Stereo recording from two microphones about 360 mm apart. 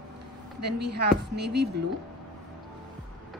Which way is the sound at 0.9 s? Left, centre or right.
Right.